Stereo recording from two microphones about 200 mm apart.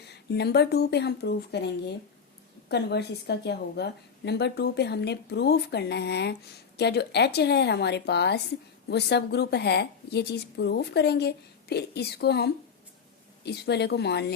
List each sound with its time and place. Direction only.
0.0 s a woman's voice: 55° left (ahead or behind)